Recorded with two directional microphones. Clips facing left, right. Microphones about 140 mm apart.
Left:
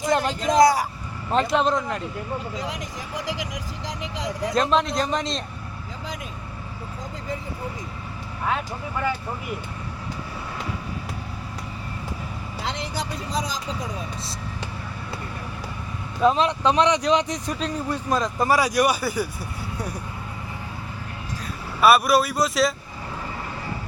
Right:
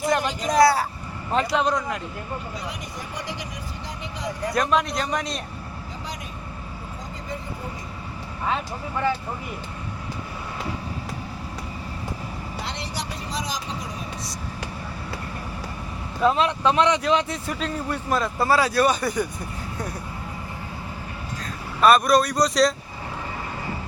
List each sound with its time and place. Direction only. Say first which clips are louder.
0.1 s speech: left 3 dB; 25° left (ahead or behind)
3.2 s speech: left 5 dB; 90° left
4.5 s speech: left 2 dB; 25° left (ahead or behind)
8.4 s speech: even; centre (ahead or behind)
16.2 s speech: left 1 dB; 15° left (ahead or behind)
21.4 s speech: even; 5° left (ahead or behind)